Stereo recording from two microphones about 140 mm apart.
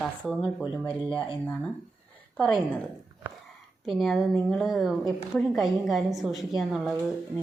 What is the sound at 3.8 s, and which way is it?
A woman's voice, centre (ahead or behind).